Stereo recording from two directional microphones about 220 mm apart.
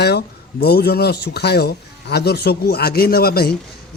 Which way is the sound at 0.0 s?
45° left (ahead or behind).